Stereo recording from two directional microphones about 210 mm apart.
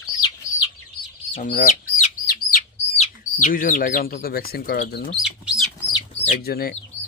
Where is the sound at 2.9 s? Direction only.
35° left (ahead or behind); by 5.2 s 50° left (ahead or behind).